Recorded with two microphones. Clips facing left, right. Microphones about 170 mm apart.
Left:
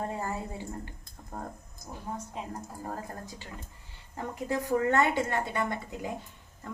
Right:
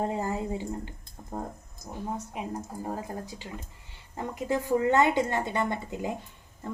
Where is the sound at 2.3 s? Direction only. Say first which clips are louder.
Right 4 dB; 15° right (ahead or behind).